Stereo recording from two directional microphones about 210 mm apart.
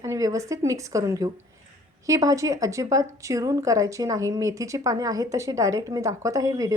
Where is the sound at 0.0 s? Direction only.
15° right (ahead or behind).